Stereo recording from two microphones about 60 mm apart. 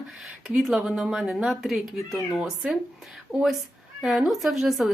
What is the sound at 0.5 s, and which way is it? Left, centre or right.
A woman's voice, centre.